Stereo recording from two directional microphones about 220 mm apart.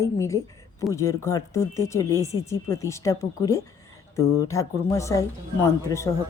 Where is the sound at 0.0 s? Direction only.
15° left (ahead or behind).